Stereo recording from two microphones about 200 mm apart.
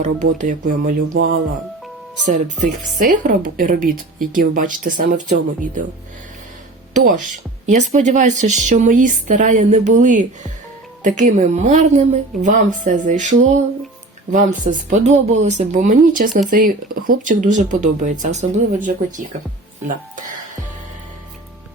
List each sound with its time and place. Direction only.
0.0 s speech: 40° right (ahead or behind)
1.1 s speech: 90° right
3.0 s a woman's voice: 45° right (ahead or behind)
6.9 s a woman's voice: 45° right (ahead or behind)